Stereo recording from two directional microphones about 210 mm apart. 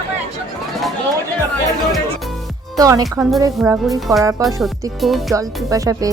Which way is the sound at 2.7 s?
15° right (ahead or behind).